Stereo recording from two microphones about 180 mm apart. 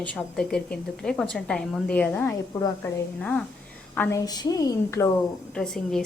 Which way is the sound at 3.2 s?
5° left (ahead or behind).